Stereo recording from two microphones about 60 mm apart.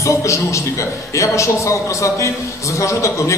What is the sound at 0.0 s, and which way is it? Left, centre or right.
A man's voice, left.